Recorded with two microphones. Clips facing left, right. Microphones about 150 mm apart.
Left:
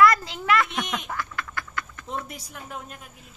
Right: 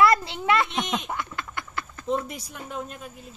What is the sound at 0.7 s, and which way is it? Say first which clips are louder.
Duck: right 2 dB; 25° right (ahead or behind).